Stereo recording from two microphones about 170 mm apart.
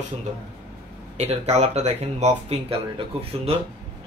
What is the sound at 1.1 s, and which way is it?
Speech, 40° right (ahead or behind).